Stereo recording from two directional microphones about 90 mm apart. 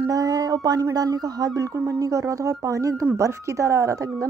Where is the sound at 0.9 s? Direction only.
45° right (ahead or behind).